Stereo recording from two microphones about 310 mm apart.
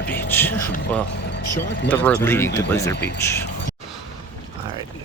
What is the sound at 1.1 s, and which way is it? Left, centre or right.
Speech, left.